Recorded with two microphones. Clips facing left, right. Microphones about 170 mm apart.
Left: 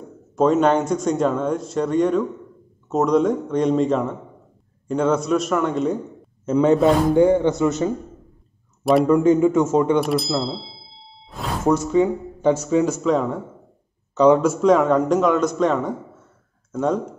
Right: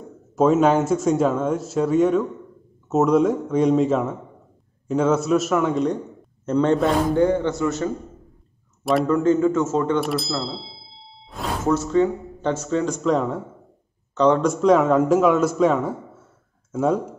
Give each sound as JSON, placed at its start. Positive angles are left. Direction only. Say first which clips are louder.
{"t": 0.4, "sound": "a man's voice", "louder": "even", "side_deg": -5}
{"t": 7.2, "sound": "speech", "louder": "left 4 dB", "side_deg": 15}
{"t": 9.0, "sound": "speech", "louder": "left 1 dB", "side_deg": 15}
{"t": 9.9, "sound": "ding", "louder": "left 3 dB", "side_deg": 0}
{"t": 11.6, "sound": "a man's voice", "louder": "left 2 dB", "side_deg": 15}